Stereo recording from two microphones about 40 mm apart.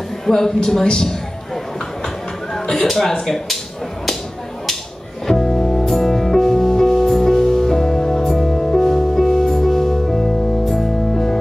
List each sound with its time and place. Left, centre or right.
0.3 s speech: centre
2.5 s a sound: centre
2.9 s speech: centre
5.2 s music: centre